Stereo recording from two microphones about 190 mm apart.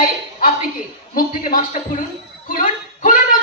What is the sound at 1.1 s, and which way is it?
Speech, 50° left (ahead or behind).